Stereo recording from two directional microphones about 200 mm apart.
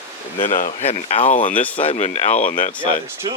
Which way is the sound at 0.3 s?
40° left (ahead or behind).